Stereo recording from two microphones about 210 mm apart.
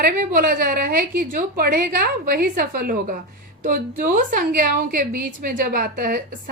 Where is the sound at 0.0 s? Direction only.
40° right (ahead or behind).